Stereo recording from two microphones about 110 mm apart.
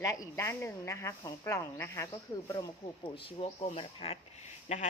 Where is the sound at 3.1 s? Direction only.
60° left (ahead or behind); by 4.8 s 90° left.